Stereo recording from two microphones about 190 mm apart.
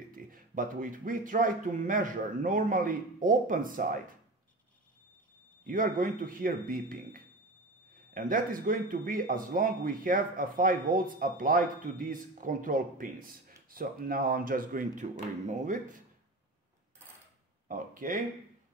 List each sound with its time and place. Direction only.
0.1 s speech: 45° right (ahead or behind)
5.7 s speech: 45° right (ahead or behind)
17.6 s speech: 45° right (ahead or behind)